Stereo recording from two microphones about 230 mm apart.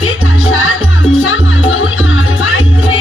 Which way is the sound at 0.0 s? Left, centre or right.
Left.